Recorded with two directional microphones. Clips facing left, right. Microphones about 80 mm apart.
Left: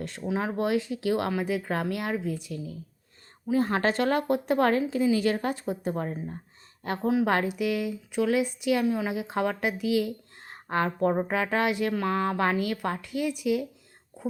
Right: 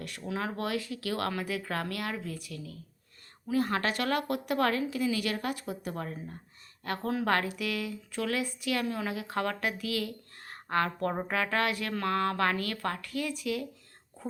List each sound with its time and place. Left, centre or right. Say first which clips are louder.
0.0 s speech: left 5 dB; left
14.2 s whispering: left 6 dB; centre